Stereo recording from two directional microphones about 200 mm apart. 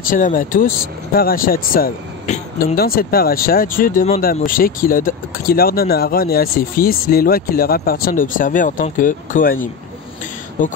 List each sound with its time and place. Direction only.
0.1 s speech: 45° left (ahead or behind)